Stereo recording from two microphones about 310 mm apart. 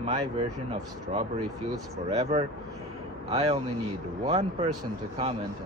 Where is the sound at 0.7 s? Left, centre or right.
Centre.